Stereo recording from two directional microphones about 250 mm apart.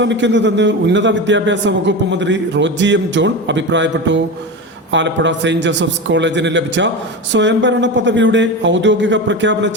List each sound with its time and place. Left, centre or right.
0.0 s a man's voice: right